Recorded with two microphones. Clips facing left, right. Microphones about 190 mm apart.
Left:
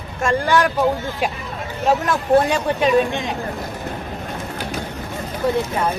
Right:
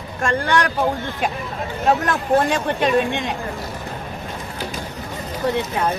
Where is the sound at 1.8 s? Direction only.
Centre (ahead or behind).